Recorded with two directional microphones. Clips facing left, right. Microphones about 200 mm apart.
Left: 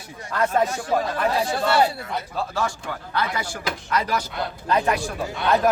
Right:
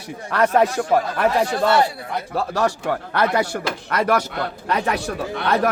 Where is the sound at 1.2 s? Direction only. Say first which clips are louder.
Right 4 dB; 60° right (ahead or behind).